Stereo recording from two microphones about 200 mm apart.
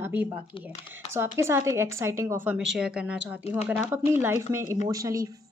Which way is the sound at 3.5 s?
30° left (ahead or behind).